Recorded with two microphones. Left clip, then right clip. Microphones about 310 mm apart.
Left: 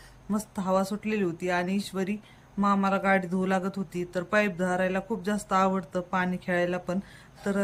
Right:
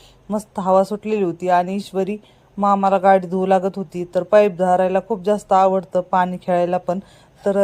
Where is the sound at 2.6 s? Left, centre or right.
Right.